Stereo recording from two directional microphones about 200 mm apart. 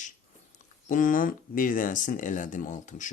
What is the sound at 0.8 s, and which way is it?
Speech, 40° left (ahead or behind).